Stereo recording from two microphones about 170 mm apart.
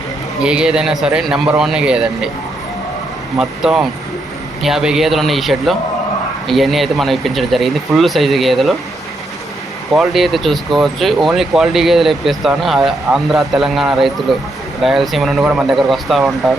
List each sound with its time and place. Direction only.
0.4 s speech: 5° right (ahead or behind)
3.3 s speech: 5° right (ahead or behind)
9.9 s speech: centre (ahead or behind)